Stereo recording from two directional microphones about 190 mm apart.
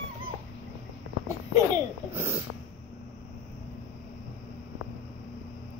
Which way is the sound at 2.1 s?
15° right (ahead or behind).